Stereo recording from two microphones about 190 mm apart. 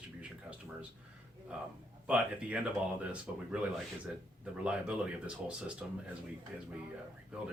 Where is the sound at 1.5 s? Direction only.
5° right (ahead or behind).